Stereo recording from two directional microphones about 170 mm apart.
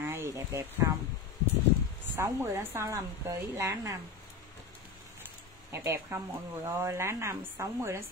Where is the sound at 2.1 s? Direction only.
15° right (ahead or behind).